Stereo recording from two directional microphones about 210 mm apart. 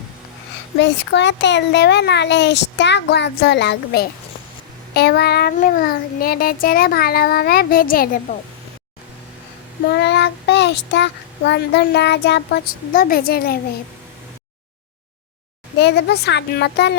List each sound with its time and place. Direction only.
0.8 s a child's voice: 55° left (ahead or behind)
4.9 s child singing: 50° left (ahead or behind)
9.9 s child singing: 55° left (ahead or behind)
15.8 s child singing: 50° left (ahead or behind)